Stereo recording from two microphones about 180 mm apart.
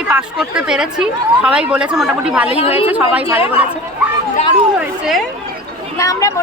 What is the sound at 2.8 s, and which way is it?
Speech, 10° right (ahead or behind).